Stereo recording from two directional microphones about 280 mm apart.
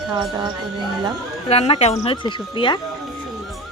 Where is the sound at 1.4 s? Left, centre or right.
Left.